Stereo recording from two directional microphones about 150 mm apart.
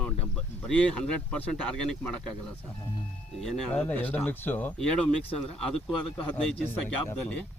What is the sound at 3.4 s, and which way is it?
Speech, 10° left (ahead or behind).